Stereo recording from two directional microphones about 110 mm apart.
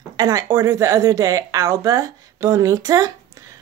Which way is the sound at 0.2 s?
35° right (ahead or behind).